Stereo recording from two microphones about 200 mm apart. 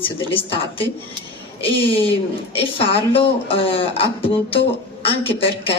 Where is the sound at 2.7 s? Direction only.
30° left (ahead or behind).